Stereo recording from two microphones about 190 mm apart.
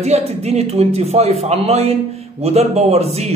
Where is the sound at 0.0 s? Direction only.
35° right (ahead or behind).